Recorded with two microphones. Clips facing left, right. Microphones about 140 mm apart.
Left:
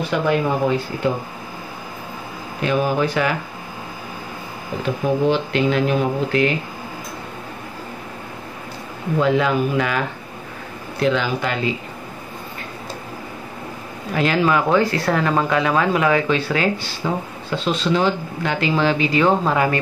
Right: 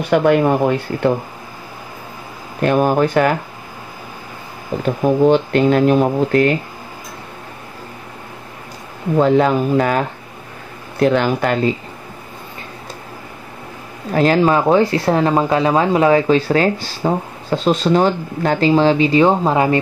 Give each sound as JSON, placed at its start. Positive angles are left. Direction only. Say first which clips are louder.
{"t": 0.1, "sound": "speech", "louder": "right 7 dB", "side_deg": -55}
{"t": 2.6, "sound": "speech", "louder": "right 5 dB", "side_deg": -50}
{"t": 4.8, "sound": "speech", "louder": "right 5 dB", "side_deg": -45}
{"t": 9.2, "sound": "speech", "louder": "right 4 dB", "side_deg": -40}
{"t": 11.0, "sound": "speech", "louder": "right 5 dB", "side_deg": -50}
{"t": 14.1, "sound": "speech", "louder": "right 5 dB", "side_deg": -40}